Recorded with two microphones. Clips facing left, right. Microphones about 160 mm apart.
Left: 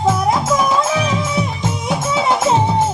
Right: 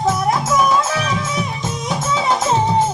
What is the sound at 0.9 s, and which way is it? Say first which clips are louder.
Music: left 3 dB; 15° left (ahead or behind).